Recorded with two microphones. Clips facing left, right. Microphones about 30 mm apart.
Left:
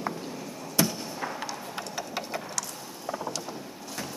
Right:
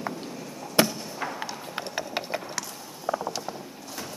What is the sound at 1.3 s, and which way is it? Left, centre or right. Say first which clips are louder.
Clip-clop: even; centre.